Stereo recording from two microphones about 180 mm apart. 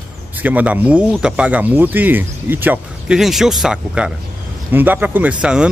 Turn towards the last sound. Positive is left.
turn(degrees=-5)  # may be behind; listen again after turning